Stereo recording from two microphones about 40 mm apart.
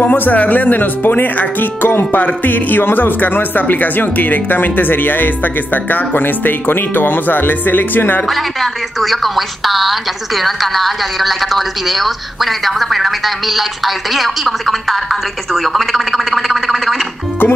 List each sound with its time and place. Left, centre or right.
0.0 s a man's voice: left
2.1 s a man's voice: left
8.3 s a woman's voice: centre